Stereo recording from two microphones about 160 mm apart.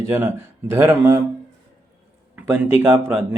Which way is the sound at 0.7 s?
15° right (ahead or behind).